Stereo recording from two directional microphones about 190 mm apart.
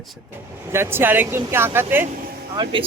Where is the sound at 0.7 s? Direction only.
10° right (ahead or behind).